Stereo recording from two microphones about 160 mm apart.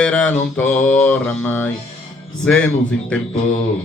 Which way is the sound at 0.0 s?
5° left (ahead or behind).